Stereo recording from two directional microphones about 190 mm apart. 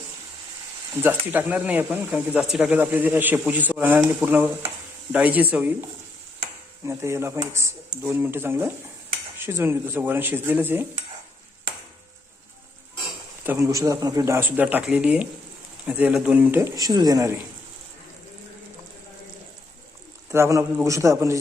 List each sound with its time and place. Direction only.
0.9 s speech: 10° right (ahead or behind)
6.8 s speech: 15° right (ahead or behind)
13.4 s speech: 15° right (ahead or behind)
20.3 s speech: 15° right (ahead or behind)